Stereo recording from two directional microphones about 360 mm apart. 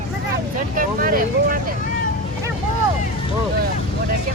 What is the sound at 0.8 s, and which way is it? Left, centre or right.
Speech, right.